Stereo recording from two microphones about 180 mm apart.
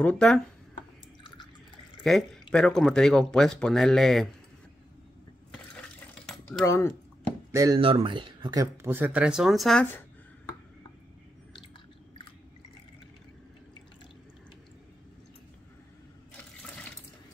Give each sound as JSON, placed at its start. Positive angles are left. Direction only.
{"t": 0.0, "sound": "speech", "side_deg": 5}
{"t": 2.0, "sound": "speech", "side_deg": 5}
{"t": 5.8, "sound": "cutlery", "side_deg": 5}
{"t": 6.6, "sound": "speech", "side_deg": 15}
{"t": 7.5, "sound": "speech", "side_deg": -20}
{"t": 8.8, "sound": "speech", "side_deg": -10}